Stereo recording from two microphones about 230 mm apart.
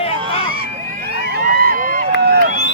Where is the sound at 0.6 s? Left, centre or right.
Right.